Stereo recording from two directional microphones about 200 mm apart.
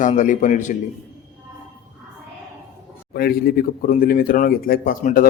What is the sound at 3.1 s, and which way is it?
Speech, 50° left (ahead or behind).